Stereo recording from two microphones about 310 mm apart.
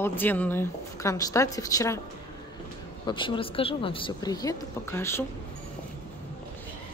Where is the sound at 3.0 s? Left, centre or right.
Centre.